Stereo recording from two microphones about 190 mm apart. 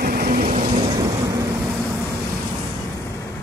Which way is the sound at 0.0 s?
50° right (ahead or behind).